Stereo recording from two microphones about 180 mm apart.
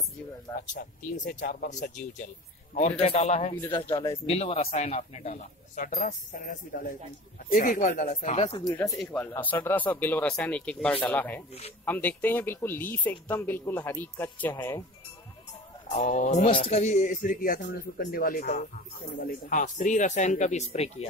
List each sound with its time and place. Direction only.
0.7 s speech: 45° left (ahead or behind)
3.9 s speech: 15° left (ahead or behind)
4.3 s speech: 35° left (ahead or behind)
8.7 s speech: 20° left (ahead or behind)
9.0 s speech: 10° left (ahead or behind)
15.9 s speech: 40° left (ahead or behind)